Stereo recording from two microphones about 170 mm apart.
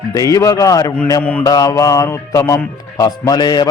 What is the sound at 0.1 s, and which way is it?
Speech, 20° left (ahead or behind).